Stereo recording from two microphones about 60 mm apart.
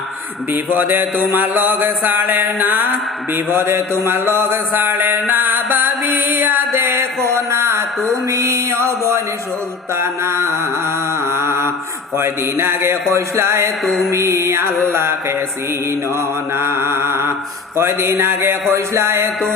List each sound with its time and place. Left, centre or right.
0.5 s a sound: right
5.3 s music: right
9.9 s mantra: right
12.1 s a man's voice: right
13.8 s mantra: centre
14.1 s a man's voice: right